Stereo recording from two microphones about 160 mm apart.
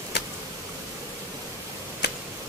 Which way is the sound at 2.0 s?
90° left.